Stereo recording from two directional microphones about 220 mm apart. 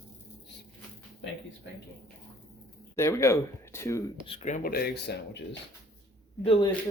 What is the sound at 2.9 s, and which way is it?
Speech, 15° left (ahead or behind).